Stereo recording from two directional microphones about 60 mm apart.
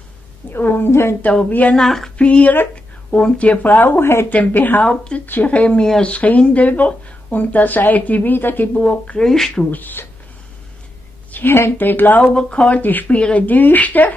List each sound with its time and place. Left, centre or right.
0.5 s speech: left
1.5 s speech: left
1.8 s a sound: centre
2.1 s speech: left
2.5 s a sound: left
3.2 s speech: centre
4.0 s speech: left
4.3 s speech: left; by 6.1 s centre
6.1 s speech: left
8.7 s speech: centre
9.2 s speech: centre
9.7 s speech: left
11.3 s speech: left
12.4 s speech: centre